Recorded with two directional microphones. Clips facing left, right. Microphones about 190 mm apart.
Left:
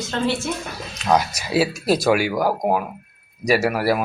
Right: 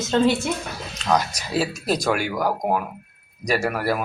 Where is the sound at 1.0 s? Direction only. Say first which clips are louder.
Left 3 dB; 10° left (ahead or behind).